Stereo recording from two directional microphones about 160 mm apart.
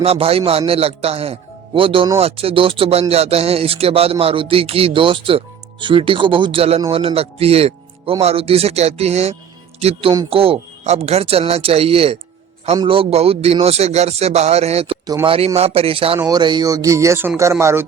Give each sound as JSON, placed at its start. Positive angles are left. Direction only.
{"t": 0.0, "sound": "speech", "side_deg": -40}
{"t": 15.0, "sound": "speech", "side_deg": -25}
{"t": 16.1, "sound": "speech", "side_deg": -25}